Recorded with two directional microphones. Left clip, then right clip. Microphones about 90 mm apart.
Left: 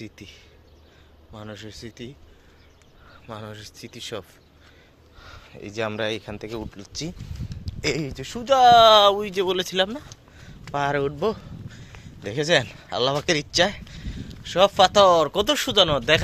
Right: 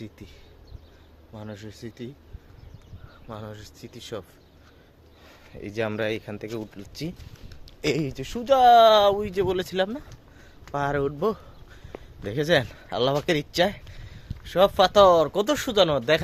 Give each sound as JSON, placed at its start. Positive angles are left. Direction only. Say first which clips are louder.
{"t": 0.0, "sound": "speech", "louder": "left 3 dB", "side_deg": 0}
{"t": 3.2, "sound": "speech", "louder": "left 2 dB", "side_deg": 15}
{"t": 5.2, "sound": "a sound", "louder": "even", "side_deg": -40}
{"t": 6.0, "sound": "speech", "louder": "left 1 dB", "side_deg": -20}
{"t": 7.6, "sound": "speech", "louder": "even", "side_deg": -35}
{"t": 8.4, "sound": "speech", "louder": "left 2 dB", "side_deg": -20}
{"t": 8.7, "sound": "speech", "louder": "left 3 dB", "side_deg": 0}
{"t": 11.2, "sound": "a sound", "louder": "left 1 dB", "side_deg": -25}
{"t": 12.2, "sound": "speech", "louder": "left 2 dB", "side_deg": -30}
{"t": 13.1, "sound": "speech", "louder": "left 2 dB", "side_deg": -20}
{"t": 14.8, "sound": "speech", "louder": "left 1 dB", "side_deg": 0}